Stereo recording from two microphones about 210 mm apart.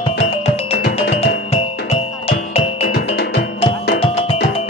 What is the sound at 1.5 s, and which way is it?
Music, 30° left (ahead or behind).